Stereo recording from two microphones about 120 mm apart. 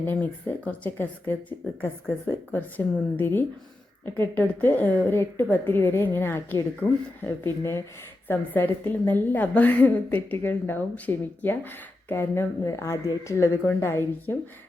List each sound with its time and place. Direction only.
0.0 s a woman's voice: 15° left (ahead or behind)